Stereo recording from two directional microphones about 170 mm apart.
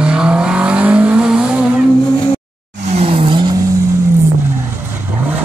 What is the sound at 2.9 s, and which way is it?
Tire squeal, 35° right (ahead or behind).